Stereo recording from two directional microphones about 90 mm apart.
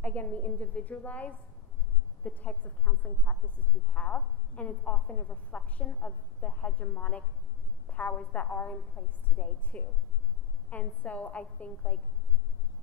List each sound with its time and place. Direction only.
0.0 s a woman's voice: 15° left (ahead or behind)